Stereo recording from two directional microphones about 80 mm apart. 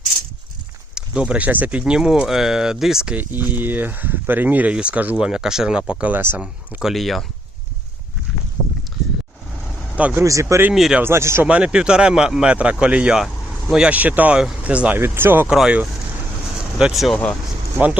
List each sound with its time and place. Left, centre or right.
0.9 s speech: centre
1.8 s speech: centre
3.2 s speech: right
6.8 s speech: centre
10.2 s speech: right
10.8 s speech: centre
11.0 s speech: right
11.4 s speech: centre
13.2 s vehicle: centre
13.8 s speech: centre
14.9 s speech: right
15.4 s speech: centre
16.6 s vehicle: centre
16.9 s speech: centre